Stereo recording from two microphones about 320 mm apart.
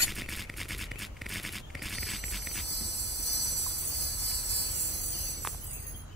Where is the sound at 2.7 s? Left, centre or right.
Left.